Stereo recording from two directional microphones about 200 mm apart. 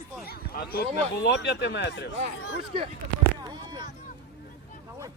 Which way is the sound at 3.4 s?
20° right (ahead or behind).